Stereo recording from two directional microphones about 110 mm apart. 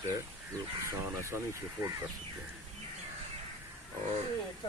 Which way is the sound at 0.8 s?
25° right (ahead or behind).